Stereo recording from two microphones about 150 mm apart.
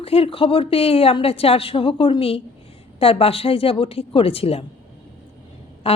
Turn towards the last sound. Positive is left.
turn(degrees=40)  # may be behind; listen again after turning